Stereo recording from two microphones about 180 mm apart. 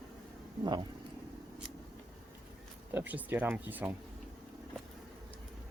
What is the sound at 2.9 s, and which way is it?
Speech, 10° right (ahead or behind).